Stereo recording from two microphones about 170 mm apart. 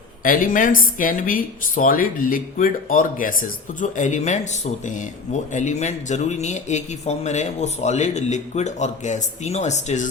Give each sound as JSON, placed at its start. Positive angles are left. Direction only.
{"t": 0.2, "sound": "a woman's voice", "side_deg": 55}